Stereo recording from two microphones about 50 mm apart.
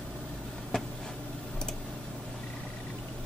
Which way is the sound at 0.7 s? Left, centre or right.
Centre.